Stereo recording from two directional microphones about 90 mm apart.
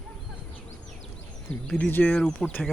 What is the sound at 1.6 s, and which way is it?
Speech, 15° left (ahead or behind).